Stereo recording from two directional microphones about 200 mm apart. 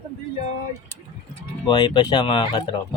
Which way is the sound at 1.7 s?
20° left (ahead or behind).